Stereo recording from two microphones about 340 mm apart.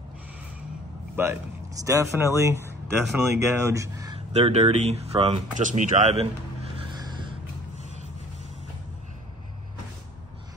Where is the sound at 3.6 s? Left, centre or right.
Centre.